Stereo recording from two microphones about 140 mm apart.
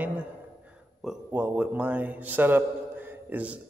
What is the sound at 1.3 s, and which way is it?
A man's voice, 15° right (ahead or behind).